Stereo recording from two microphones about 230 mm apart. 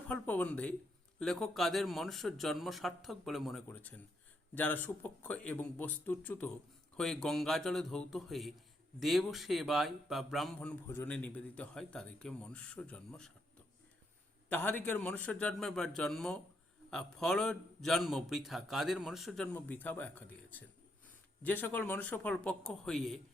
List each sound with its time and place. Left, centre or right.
0.1 s speech: centre
14.5 s speech: centre